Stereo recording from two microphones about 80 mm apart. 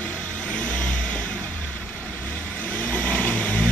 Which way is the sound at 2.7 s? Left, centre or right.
Centre.